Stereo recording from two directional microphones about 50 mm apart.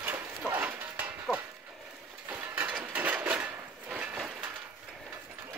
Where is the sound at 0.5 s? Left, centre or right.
Right.